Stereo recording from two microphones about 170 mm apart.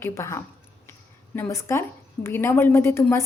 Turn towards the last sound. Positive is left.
turn(degrees=15)  # may be behind; listen again after turning